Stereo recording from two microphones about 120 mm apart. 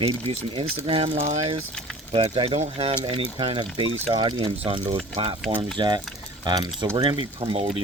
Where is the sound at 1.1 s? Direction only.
75° right (ahead or behind).